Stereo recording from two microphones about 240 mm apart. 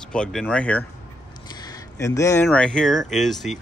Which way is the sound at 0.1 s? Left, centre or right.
Centre.